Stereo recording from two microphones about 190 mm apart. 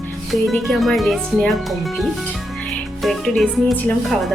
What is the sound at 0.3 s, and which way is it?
Speech, centre (ahead or behind).